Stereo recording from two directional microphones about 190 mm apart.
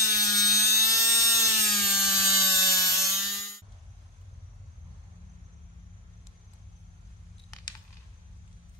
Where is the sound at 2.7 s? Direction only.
15° left (ahead or behind).